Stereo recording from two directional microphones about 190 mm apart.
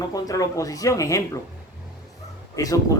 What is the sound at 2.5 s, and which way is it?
Speech, 20° left (ahead or behind).